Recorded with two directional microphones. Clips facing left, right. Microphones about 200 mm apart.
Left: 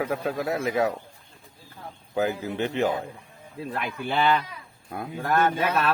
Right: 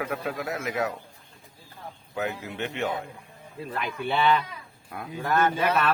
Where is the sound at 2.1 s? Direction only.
30° left (ahead or behind).